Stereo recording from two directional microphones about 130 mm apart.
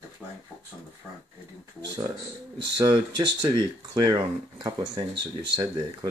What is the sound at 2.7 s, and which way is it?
Speech, 35° right (ahead or behind).